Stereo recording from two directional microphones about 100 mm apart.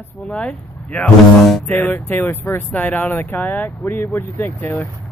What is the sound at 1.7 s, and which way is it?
Speech, 15° left (ahead or behind).